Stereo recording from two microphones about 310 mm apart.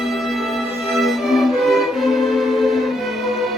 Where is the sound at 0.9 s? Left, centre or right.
Centre.